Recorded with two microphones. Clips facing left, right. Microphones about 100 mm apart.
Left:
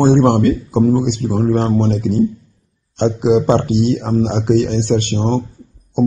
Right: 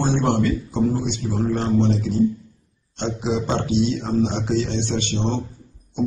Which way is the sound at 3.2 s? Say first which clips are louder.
Left 10 dB; 55° left (ahead or behind).